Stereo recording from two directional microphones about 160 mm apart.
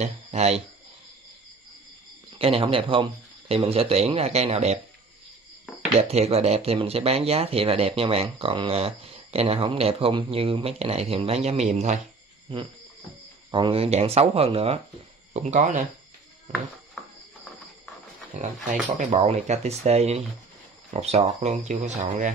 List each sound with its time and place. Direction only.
0.0 s speech: 45° right (ahead or behind)
2.3 s speech: 35° right (ahead or behind)
5.9 s speech: 40° right (ahead or behind)
12.5 s speech: 35° right (ahead or behind)
15.3 s speech: 45° right (ahead or behind)
17.0 s music: 5° left (ahead or behind)
18.4 s speech: 50° right (ahead or behind)